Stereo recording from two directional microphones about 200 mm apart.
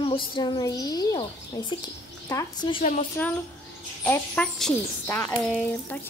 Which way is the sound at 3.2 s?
10° left (ahead or behind).